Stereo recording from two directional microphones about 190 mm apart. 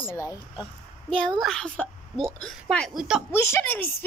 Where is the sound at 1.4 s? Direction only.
5° left (ahead or behind).